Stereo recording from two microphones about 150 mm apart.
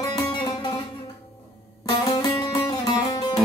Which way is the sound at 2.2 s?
25° left (ahead or behind).